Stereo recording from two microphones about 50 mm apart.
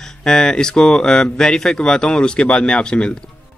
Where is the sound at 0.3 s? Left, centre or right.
Centre.